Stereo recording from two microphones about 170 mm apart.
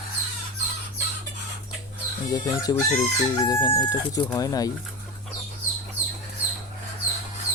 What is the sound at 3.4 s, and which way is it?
Speech, 20° left (ahead or behind).